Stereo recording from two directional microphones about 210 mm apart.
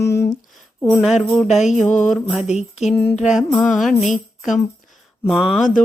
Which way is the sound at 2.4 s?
30° left (ahead or behind).